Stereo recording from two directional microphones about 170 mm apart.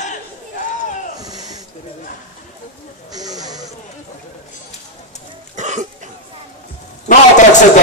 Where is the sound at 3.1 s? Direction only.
20° right (ahead or behind).